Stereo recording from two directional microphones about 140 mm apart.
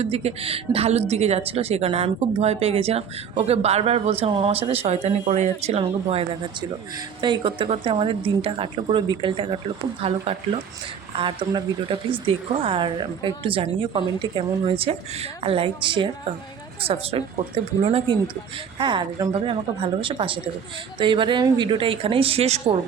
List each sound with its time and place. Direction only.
0.0 s a woman's voice: 50° right (ahead or behind)
18.8 s a woman's voice: 35° right (ahead or behind); by 22.7 s 50° right (ahead or behind)